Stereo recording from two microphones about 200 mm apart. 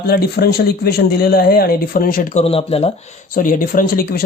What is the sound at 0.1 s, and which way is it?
Speech, 50° left (ahead or behind).